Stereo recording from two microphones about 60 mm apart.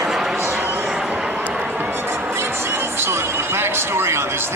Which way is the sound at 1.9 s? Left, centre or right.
Right.